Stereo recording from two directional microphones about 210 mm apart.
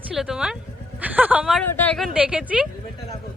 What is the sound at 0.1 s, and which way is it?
A woman's voice, 5° right (ahead or behind).